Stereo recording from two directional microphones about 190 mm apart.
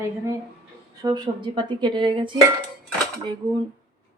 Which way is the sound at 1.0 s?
20° right (ahead or behind).